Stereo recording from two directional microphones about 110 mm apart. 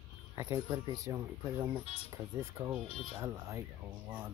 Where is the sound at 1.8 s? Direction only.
65° left (ahead or behind).